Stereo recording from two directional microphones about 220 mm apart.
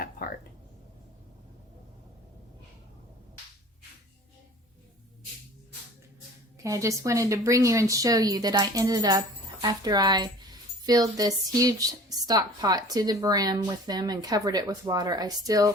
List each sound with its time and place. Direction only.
6.6 s a woman's voice: 15° right (ahead or behind)